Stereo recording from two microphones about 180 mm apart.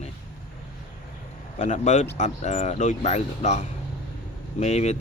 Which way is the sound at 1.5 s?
40° left (ahead or behind).